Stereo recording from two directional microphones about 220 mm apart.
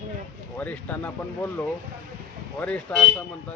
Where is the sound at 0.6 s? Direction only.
5° left (ahead or behind).